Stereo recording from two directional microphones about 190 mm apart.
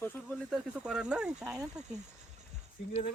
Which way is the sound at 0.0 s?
10° left (ahead or behind).